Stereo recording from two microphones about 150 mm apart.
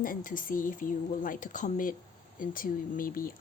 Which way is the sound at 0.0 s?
65° left (ahead or behind).